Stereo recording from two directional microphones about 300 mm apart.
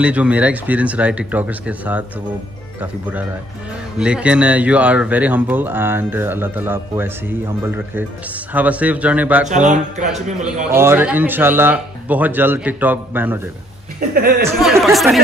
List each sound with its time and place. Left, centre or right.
0.0 s speech: centre
9.5 s speech: right
10.4 s speech: centre
13.9 s speech: right
14.8 s speech: centre